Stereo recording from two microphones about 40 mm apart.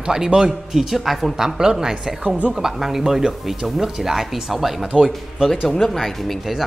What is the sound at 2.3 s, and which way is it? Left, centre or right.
Speech, right.